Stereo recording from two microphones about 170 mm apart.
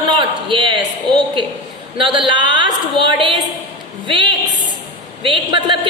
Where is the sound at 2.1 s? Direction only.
30° right (ahead or behind).